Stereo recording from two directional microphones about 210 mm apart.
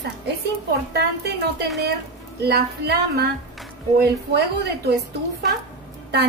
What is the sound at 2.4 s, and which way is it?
Speech, 50° right (ahead or behind).